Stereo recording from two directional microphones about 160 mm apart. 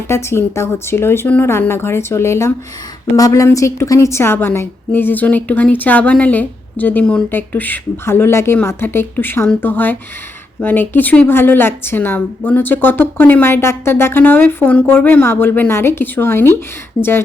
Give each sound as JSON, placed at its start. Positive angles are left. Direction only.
{"t": 0.1, "sound": "a woman's voice", "side_deg": 15}